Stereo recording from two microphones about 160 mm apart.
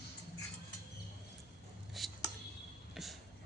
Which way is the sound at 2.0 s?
Centre (ahead or behind).